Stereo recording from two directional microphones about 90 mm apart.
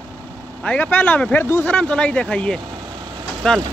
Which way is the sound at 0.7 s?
15° left (ahead or behind).